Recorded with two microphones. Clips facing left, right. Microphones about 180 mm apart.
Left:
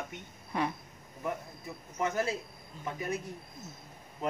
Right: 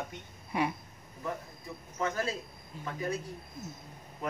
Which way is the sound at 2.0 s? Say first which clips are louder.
Left 1 dB; 20° left (ahead or behind).